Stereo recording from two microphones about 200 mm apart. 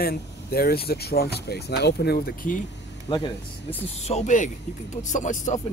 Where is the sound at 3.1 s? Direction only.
25° left (ahead or behind).